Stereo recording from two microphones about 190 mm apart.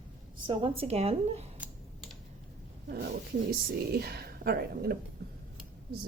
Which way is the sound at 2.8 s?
55° right (ahead or behind).